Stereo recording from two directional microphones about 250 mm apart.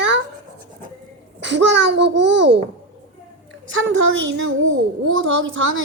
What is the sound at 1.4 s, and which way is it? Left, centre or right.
A child's voice, right.